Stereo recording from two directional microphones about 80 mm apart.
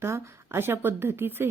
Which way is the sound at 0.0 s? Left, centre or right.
Right.